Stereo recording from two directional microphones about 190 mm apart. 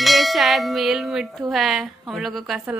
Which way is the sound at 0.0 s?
Centre (ahead or behind).